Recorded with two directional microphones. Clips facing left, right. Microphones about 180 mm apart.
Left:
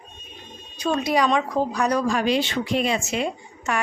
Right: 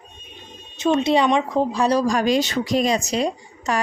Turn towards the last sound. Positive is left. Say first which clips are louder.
# right 3 dB
turn(degrees=-35)  # may be behind; listen again after turning